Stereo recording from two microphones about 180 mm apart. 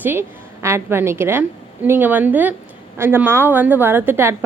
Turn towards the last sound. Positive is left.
turn(degrees=-10)  # may be behind; listen again after turning